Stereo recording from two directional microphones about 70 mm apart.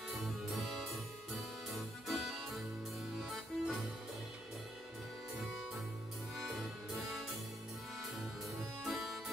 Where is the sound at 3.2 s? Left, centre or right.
Centre.